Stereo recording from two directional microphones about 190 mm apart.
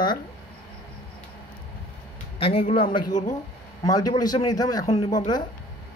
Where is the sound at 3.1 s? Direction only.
40° left (ahead or behind).